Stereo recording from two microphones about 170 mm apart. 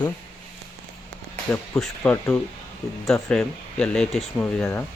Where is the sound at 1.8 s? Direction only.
5° left (ahead or behind).